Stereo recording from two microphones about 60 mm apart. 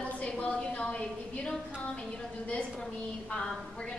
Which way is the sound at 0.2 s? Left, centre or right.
Centre.